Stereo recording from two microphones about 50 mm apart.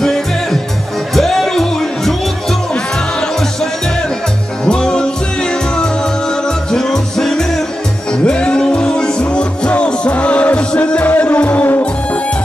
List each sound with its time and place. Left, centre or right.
0.0 s music: centre
4.6 s music: centre
8.1 s music: centre